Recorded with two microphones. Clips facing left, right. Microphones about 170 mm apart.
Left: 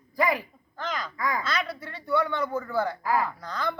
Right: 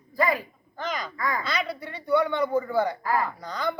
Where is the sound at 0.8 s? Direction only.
20° right (ahead or behind).